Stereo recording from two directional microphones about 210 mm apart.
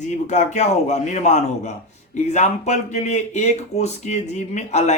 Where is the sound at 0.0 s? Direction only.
35° left (ahead or behind).